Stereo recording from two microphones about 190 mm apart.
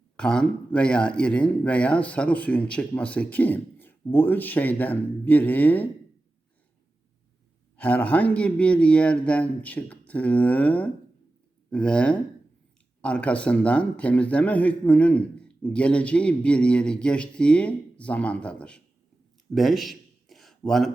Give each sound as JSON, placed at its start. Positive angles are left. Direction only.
{"t": 0.2, "sound": "a man's voice", "side_deg": 5}
{"t": 7.8, "sound": "a man's voice", "side_deg": 5}
{"t": 19.5, "sound": "a sound", "side_deg": 0}